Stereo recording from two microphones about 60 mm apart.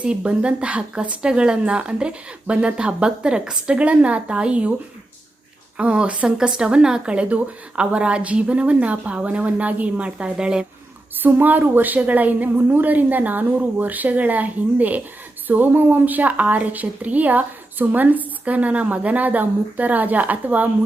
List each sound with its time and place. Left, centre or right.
0.0 s speech: centre
5.7 s a woman's voice: centre
11.2 s a woman's voice: right